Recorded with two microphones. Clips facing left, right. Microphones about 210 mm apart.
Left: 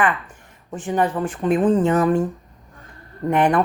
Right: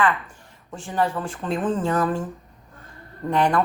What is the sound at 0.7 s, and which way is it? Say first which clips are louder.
Speech: left 3 dB; 20° left (ahead or behind).